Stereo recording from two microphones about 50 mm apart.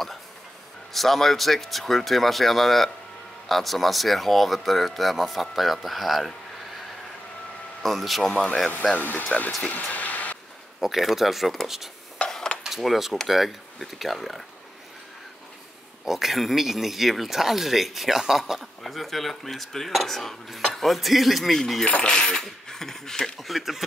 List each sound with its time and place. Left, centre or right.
0.9 s speech: centre
7.8 s speech: centre
8.9 s speech: left
9.6 s vehicle: left
10.8 s speech: centre
12.3 s dishes: centre
12.6 s speech: centre
16.1 s speech: centre
22.0 s speech: centre